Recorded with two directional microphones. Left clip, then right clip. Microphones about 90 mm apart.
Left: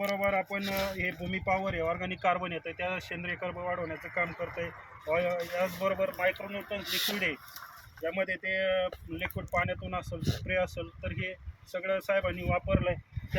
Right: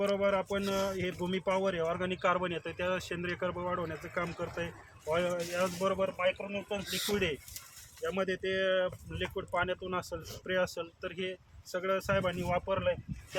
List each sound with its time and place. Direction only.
0.2 s speech: 35° right (ahead or behind)
4.0 s speech: 30° right (ahead or behind)
5.9 s speech: 5° right (ahead or behind)
6.7 s speech: 15° right (ahead or behind)
8.1 s speech: 35° right (ahead or behind)